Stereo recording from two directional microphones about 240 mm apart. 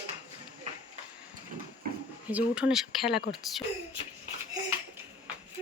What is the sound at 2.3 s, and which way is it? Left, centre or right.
Speech, centre.